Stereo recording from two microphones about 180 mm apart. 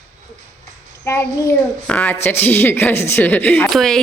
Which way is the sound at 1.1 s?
15° left (ahead or behind).